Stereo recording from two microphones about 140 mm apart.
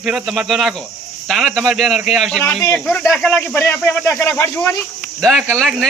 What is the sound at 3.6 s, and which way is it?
Speech, 15° left (ahead or behind).